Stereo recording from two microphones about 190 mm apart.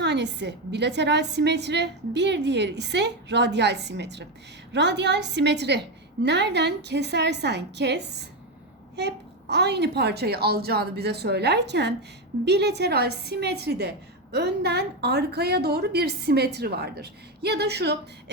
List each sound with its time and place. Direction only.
0.0 s a woman's voice: 65° right (ahead or behind)